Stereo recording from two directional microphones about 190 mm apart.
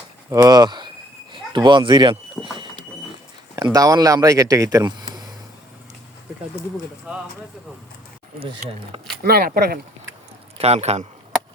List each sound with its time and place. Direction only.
0.3 s speech: 20° right (ahead or behind)
3.5 s speech: 20° right (ahead or behind)
7.1 s speech: 5° right (ahead or behind)
8.4 s speech: 30° right (ahead or behind)
9.2 s speech: 55° right (ahead or behind)
10.6 s a man's voice: 35° right (ahead or behind)